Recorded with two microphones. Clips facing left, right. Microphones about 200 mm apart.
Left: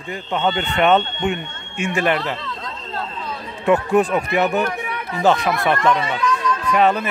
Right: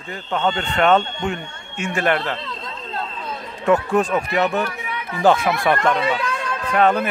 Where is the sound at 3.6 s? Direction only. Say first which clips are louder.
Left 1 dB; 15° left (ahead or behind).